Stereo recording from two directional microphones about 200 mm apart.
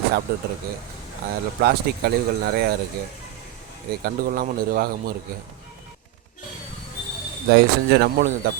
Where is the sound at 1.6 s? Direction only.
50° right (ahead or behind).